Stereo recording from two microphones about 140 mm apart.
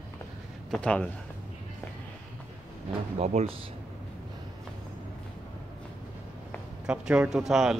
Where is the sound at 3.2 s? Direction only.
55° right (ahead or behind).